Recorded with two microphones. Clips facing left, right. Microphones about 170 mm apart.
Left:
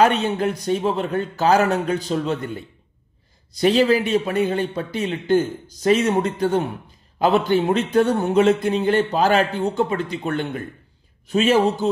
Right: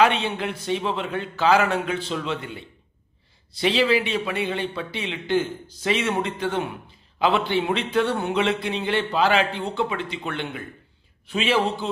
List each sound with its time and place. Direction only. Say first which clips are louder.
0.0 s a man's voice: left 3 dB; 45° left (ahead or behind)